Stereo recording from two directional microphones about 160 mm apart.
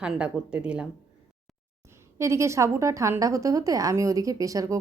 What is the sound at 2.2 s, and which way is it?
A woman's voice, 20° right (ahead or behind).